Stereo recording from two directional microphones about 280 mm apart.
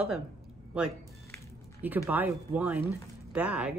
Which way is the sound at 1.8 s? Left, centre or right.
Centre.